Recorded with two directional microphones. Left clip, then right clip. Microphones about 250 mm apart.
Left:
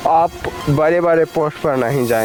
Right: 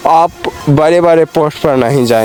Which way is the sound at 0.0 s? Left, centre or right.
Right.